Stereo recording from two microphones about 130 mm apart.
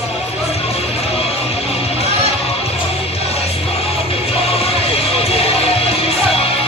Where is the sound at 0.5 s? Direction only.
50° left (ahead or behind).